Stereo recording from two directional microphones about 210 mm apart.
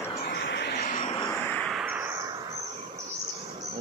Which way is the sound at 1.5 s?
5° left (ahead or behind).